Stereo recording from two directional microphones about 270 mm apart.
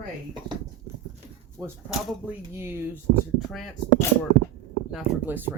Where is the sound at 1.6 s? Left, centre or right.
Centre.